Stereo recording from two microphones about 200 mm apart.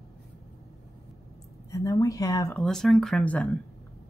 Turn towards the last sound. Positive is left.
turn(degrees=5)  # may be behind; listen again after turning